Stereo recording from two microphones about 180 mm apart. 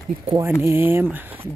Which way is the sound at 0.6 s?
15° right (ahead or behind).